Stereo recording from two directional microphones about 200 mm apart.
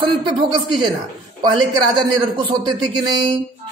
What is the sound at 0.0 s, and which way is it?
Speech, 25° right (ahead or behind).